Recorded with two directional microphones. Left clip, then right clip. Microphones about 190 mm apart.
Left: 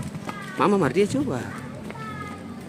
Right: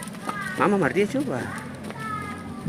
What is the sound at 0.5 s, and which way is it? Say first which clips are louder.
Speech: left 1 dB; 30° left (ahead or behind).